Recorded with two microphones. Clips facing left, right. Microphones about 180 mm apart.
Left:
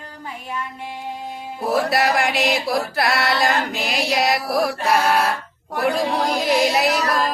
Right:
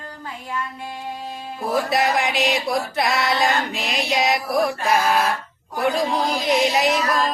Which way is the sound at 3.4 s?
Centre (ahead or behind).